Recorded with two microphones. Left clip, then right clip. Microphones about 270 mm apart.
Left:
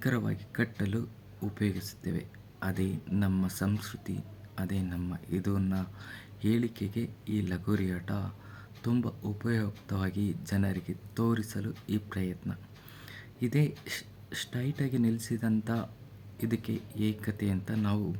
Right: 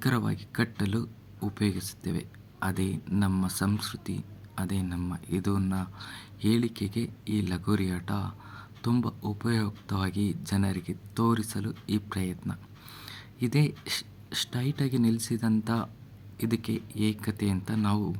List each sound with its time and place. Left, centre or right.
0.0 s speech: centre